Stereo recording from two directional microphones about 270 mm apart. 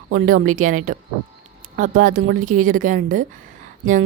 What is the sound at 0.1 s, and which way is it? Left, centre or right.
A woman's voice, right.